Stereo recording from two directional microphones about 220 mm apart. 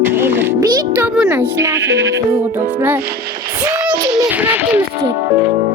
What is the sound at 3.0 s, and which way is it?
Speech, 45° right (ahead or behind).